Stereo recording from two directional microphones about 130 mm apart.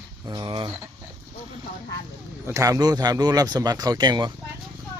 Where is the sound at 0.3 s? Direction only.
35° right (ahead or behind).